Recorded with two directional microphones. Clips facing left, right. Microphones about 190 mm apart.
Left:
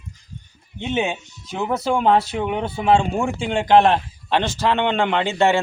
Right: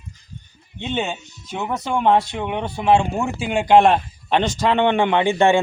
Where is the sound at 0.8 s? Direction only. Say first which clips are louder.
Left 2 dB; 10° left (ahead or behind).